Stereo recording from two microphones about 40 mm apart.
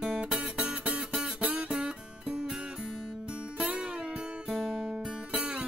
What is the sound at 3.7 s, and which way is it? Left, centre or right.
Music, right.